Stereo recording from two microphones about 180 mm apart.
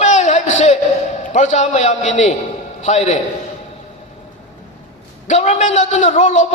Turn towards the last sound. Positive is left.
turn(degrees=40)  # may be behind; listen again after turning